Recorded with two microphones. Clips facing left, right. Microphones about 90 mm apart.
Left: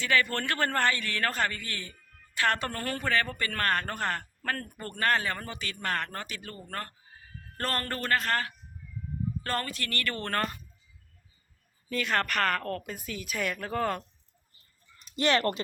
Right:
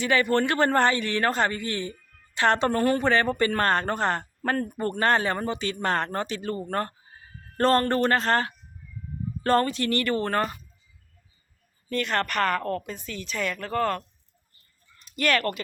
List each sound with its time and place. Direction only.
0.0 s a man's voice: 20° right (ahead or behind)
11.9 s a woman's voice: centre (ahead or behind)
12.8 s speech: 5° left (ahead or behind)
15.1 s speech: 25° left (ahead or behind)